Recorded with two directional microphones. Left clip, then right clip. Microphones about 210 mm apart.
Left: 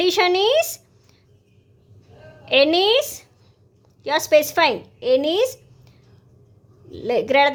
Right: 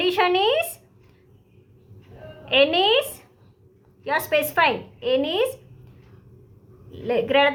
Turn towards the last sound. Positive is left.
turn(degrees=40)  # may be behind; listen again after turning